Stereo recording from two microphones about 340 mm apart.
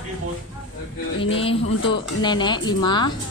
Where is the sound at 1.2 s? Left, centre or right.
Centre.